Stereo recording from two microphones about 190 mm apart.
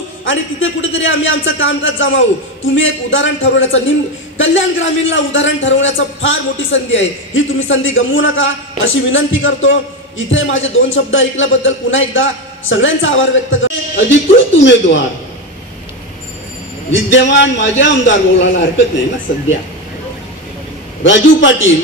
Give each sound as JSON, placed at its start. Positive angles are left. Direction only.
{"t": 0.2, "sound": "a man's voice", "side_deg": 90}
{"t": 16.9, "sound": "a man's voice", "side_deg": 80}
{"t": 21.0, "sound": "a man's voice", "side_deg": 80}